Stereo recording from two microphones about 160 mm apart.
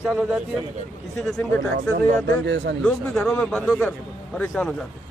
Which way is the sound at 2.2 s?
90° right.